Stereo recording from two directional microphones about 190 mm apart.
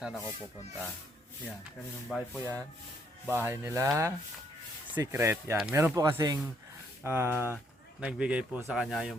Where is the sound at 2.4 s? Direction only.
15° right (ahead or behind).